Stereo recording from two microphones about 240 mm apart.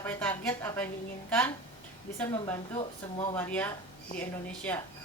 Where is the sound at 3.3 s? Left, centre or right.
Centre.